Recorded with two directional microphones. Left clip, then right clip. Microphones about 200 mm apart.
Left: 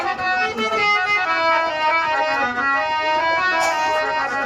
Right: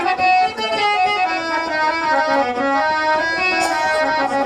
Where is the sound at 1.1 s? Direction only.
30° right (ahead or behind).